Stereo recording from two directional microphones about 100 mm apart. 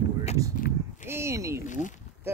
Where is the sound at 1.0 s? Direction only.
25° right (ahead or behind).